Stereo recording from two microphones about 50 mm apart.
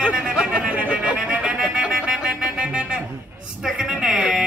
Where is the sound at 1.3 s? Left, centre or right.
Right.